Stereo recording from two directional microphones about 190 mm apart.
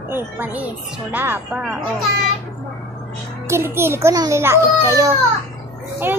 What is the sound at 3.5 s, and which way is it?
A child's voice, 10° right (ahead or behind).